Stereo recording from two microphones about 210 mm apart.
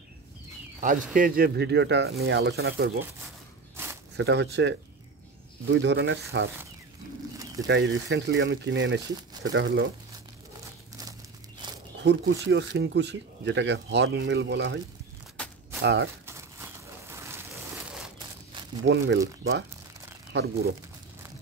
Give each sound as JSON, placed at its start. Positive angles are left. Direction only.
{"t": 0.7, "sound": "speech", "side_deg": -40}
{"t": 3.7, "sound": "walk", "side_deg": -10}
{"t": 4.2, "sound": "speech", "side_deg": -55}
{"t": 7.6, "sound": "speech", "side_deg": -55}
{"t": 12.0, "sound": "speech", "side_deg": -55}
{"t": 15.8, "sound": "speech", "side_deg": -55}
{"t": 16.3, "sound": "a sound", "side_deg": -15}
{"t": 18.9, "sound": "speech", "side_deg": -55}